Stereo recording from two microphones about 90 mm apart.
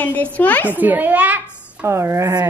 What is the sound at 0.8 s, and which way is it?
Speech, 20° right (ahead or behind).